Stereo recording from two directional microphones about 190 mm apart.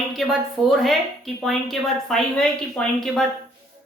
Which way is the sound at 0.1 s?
Centre (ahead or behind).